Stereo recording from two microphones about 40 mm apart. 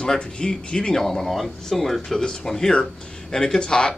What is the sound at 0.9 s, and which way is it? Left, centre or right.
Speech, centre.